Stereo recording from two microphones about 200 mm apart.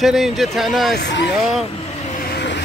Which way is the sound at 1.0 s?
60° left (ahead or behind).